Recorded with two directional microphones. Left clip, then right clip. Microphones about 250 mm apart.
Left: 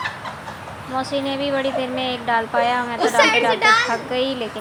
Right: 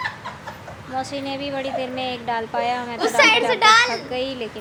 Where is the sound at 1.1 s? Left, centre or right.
Centre.